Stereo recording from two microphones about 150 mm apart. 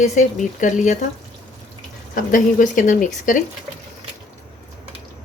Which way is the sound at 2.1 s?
60° left (ahead or behind).